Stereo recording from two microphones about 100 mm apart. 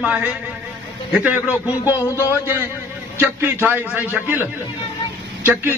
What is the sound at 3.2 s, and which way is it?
A man's voice, 25° right (ahead or behind).